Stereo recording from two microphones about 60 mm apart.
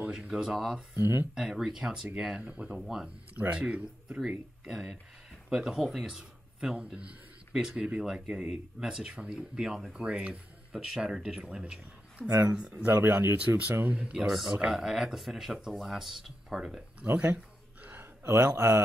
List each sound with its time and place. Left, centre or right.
0.0 s a sound: centre
0.3 s speech: centre
0.9 s speech: right
1.3 s speech: centre
2.8 s speech: centre
3.3 s speech: centre
10.0 s speech: right
12.3 s speech: right
12.5 s speech: centre
12.8 s speech: right
13.8 s speech: right
14.2 s speech: centre
17.0 s speech: right
18.4 s speech: right